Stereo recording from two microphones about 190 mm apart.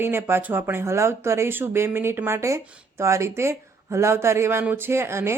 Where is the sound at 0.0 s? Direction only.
10° right (ahead or behind).